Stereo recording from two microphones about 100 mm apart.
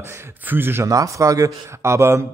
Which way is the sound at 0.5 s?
20° right (ahead or behind).